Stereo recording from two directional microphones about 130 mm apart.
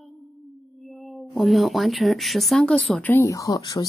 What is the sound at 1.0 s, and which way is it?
Speech, centre (ahead or behind).